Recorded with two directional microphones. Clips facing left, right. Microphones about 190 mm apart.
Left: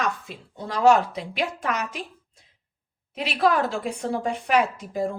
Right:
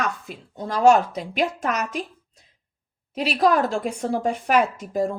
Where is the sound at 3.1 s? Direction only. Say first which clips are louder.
Right 3 dB; 40° right (ahead or behind).